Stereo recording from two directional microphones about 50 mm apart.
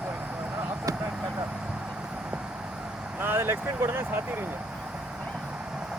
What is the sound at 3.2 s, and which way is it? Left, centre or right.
Speech, right.